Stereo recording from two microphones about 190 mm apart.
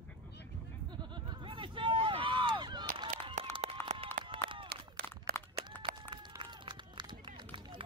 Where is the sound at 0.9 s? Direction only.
25° right (ahead or behind).